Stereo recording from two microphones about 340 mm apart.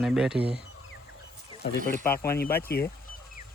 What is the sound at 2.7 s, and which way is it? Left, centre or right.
Speech, left.